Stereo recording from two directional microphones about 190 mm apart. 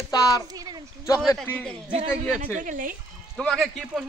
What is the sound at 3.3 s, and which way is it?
Speech, centre (ahead or behind).